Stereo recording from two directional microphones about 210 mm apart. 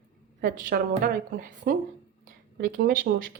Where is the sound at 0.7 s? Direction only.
45° right (ahead or behind).